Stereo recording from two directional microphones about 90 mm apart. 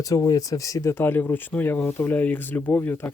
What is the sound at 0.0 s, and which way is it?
Speech, 40° left (ahead or behind).